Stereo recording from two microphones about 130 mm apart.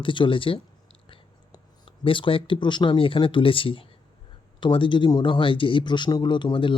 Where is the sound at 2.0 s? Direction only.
40° left (ahead or behind).